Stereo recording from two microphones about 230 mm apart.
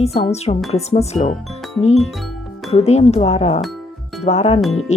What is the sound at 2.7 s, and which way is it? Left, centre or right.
Speech, left.